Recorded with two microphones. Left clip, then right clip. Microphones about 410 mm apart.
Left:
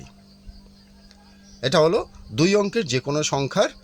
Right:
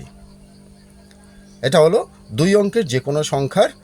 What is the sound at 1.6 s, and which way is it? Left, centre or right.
Speech, left.